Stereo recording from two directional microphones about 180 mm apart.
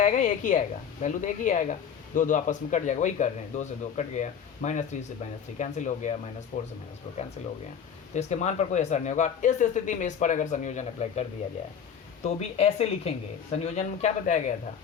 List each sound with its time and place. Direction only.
0.0 s speech: 45° left (ahead or behind)
7.4 s speech: 40° left (ahead or behind)